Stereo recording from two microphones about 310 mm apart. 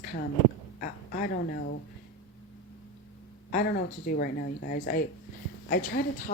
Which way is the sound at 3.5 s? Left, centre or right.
Left.